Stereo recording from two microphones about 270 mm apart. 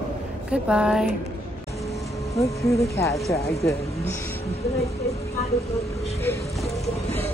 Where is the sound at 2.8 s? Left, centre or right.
Centre.